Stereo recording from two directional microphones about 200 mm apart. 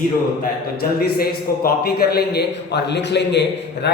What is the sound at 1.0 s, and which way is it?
A man's voice, 50° left (ahead or behind).